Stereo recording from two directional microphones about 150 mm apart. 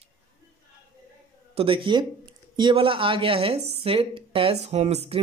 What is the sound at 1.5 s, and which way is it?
A woman's voice, 35° right (ahead or behind).